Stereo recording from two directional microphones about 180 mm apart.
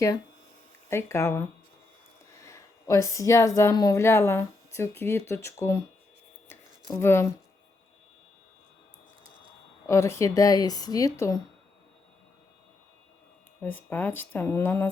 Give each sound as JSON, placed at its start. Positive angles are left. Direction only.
{"t": 0.9, "sound": "speech", "side_deg": 15}
{"t": 6.8, "sound": "speech", "side_deg": 15}
{"t": 9.8, "sound": "speech", "side_deg": 15}
{"t": 13.6, "sound": "speech", "side_deg": 10}